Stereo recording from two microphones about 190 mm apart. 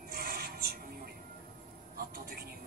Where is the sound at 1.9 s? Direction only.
55° right (ahead or behind).